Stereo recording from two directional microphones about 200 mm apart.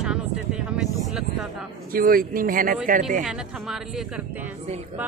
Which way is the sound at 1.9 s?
45° right (ahead or behind).